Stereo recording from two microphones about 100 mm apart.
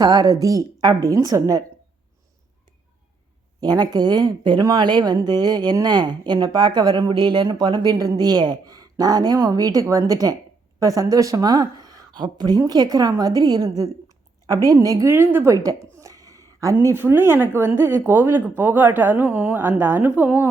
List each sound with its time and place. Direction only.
0.0 s speech: 40° right (ahead or behind)
3.6 s a woman's voice: 45° right (ahead or behind)
16.0 s a sound: 35° right (ahead or behind)
16.8 s a woman's voice: 25° right (ahead or behind)